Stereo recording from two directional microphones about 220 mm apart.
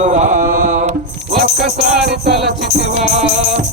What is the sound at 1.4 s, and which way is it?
Music, centre (ahead or behind).